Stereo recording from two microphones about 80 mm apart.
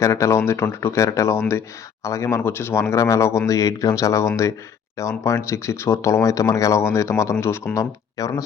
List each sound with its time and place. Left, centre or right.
0.0 s speech: left